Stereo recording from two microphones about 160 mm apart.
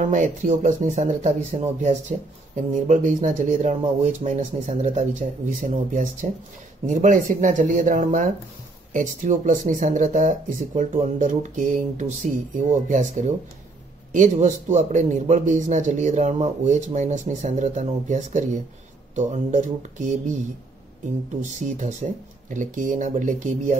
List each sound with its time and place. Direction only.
0.0 s a man's voice: 50° right (ahead or behind)
3.7 s a man's voice: 40° right (ahead or behind)
21.6 s a man's voice: 50° right (ahead or behind)